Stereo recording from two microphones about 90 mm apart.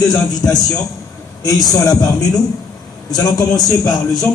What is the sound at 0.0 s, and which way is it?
A man's voice, 50° left (ahead or behind).